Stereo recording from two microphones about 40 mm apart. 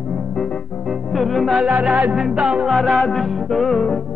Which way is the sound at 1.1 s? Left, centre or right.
Centre.